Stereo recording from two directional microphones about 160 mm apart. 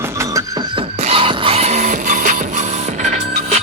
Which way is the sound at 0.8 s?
35° right (ahead or behind).